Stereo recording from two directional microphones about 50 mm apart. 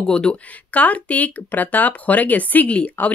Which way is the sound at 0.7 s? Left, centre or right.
Left.